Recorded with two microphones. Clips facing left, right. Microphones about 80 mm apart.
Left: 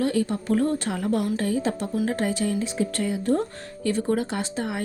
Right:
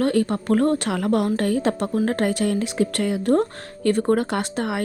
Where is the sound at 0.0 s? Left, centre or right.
Right.